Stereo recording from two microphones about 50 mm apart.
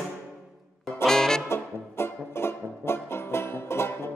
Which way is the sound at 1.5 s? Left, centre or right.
Left.